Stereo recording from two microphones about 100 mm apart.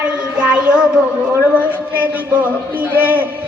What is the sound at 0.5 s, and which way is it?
A child's voice, 10° right (ahead or behind).